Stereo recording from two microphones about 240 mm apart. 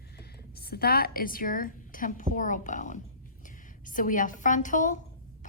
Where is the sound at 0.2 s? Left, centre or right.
Left.